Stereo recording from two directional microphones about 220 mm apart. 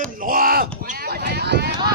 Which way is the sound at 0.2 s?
40° right (ahead or behind).